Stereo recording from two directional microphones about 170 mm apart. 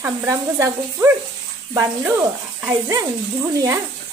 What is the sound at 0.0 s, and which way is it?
Speech, 15° right (ahead or behind).